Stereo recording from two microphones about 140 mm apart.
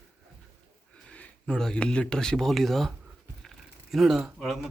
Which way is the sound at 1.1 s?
10° left (ahead or behind).